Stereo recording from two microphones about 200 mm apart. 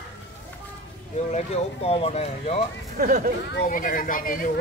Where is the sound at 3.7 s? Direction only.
40° left (ahead or behind).